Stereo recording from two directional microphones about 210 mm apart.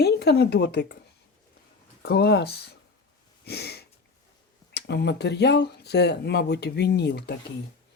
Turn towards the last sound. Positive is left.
turn(degrees=50)  # may be behind; listen again after turning